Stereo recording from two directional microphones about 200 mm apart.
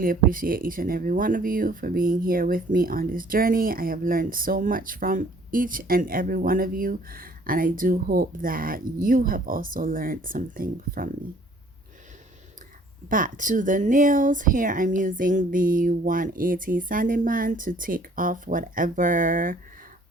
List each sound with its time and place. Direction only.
0.0 s speech: 45° right (ahead or behind)
13.1 s speech: 40° right (ahead or behind)